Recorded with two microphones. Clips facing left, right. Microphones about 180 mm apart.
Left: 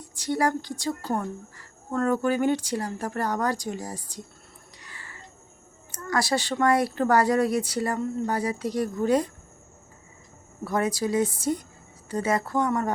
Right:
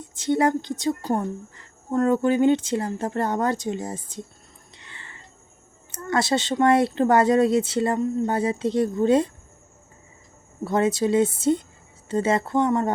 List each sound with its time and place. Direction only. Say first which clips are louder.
0.0 s speech: right 4 dB; 20° right (ahead or behind)
4.8 s a sound: even; 25° right (ahead or behind)
5.9 s speech: right 3 dB; 25° right (ahead or behind)
10.6 s speech: right 4 dB; 25° right (ahead or behind)